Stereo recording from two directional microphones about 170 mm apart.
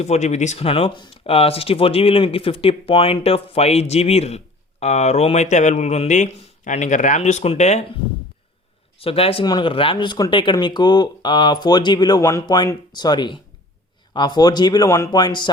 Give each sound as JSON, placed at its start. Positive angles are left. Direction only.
{"t": 0.0, "sound": "speech", "side_deg": 40}
{"t": 9.0, "sound": "speech", "side_deg": 35}